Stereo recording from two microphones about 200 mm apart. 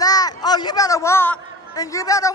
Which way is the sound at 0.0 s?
20° left (ahead or behind).